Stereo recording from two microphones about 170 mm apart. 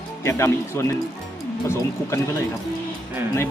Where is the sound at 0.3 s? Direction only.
15° left (ahead or behind).